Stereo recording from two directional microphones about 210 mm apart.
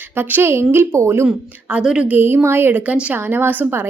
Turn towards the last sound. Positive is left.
turn(degrees=-10)  # may be behind; listen again after turning